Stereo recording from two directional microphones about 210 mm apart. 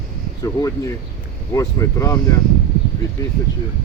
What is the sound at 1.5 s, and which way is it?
Speech, 15° left (ahead or behind).